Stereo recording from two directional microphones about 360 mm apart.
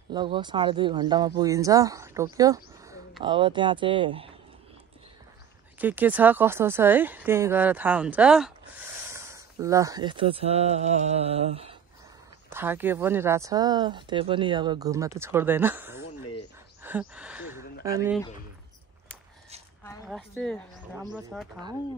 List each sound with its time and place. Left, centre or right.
0.1 s speech: centre
5.8 s speech: centre
12.4 s speech: centre
16.0 s a sound: left
16.8 s gasp: centre
19.8 s a woman's voice: centre